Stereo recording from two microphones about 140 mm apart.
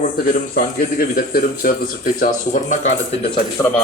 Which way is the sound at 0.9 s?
90° left.